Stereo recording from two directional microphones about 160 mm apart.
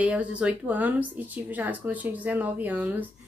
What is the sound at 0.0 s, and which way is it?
Speech, 10° right (ahead or behind).